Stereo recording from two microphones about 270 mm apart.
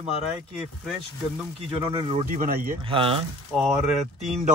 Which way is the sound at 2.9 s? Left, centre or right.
Centre.